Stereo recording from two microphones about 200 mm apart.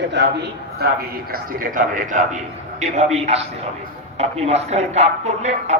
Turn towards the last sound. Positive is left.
turn(degrees=-35)  # may be behind; listen again after turning